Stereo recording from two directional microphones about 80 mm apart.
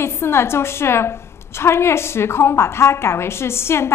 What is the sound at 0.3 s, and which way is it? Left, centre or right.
A woman's voice, left.